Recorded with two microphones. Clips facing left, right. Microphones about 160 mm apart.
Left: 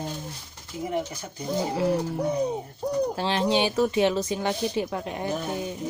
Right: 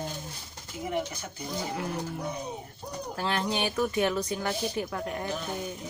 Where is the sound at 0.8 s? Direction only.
30° left (ahead or behind).